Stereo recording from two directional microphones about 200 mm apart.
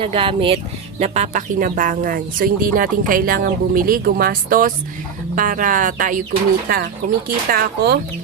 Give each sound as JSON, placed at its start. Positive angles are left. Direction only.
{"t": 0.0, "sound": "speech", "side_deg": -25}
{"t": 7.3, "sound": "speech", "side_deg": -50}